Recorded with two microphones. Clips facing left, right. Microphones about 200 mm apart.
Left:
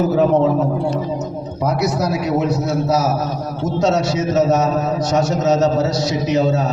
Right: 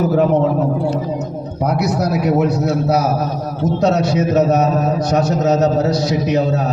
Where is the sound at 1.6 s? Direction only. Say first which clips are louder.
Right 1 dB; 60° right (ahead or behind).